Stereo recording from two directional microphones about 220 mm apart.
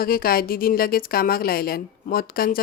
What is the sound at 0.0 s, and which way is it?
A woman's voice, 40° left (ahead or behind).